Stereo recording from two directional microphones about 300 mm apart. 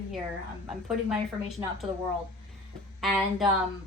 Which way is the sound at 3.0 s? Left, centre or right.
Centre.